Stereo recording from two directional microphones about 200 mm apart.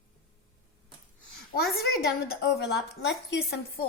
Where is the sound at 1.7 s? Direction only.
50° left (ahead or behind).